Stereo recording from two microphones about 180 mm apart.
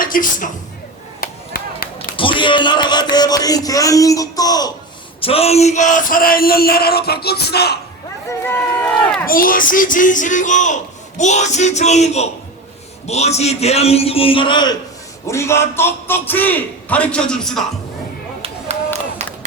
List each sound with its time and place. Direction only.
0.0 s speech: 50° left (ahead or behind)
1.2 s chop: 55° left (ahead or behind)
2.1 s music: 30° left (ahead or behind)
5.2 s a sound: 35° left (ahead or behind); by 7.8 s 65° left (ahead or behind)
8.3 s a man's voice: 10° left (ahead or behind)
9.2 s a man's voice: 50° left (ahead or behind); by 17.6 s 5° left (ahead or behind)
18.7 s run: 35° right (ahead or behind)
19.2 s a sound: 35° right (ahead or behind)